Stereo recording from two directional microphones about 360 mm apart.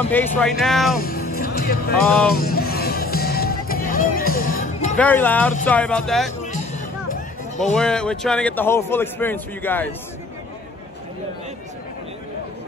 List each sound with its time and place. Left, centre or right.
0.1 s speech: centre
0.9 s speech: left
1.4 s music: left
4.9 s speech: centre
6.4 s music: centre
7.7 s speech: centre